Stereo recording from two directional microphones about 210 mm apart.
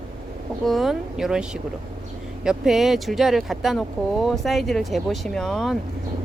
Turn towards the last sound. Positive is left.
turn(degrees=0)  # may be behind; listen again after turning